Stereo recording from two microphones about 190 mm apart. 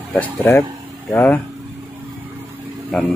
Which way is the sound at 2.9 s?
Centre (ahead or behind).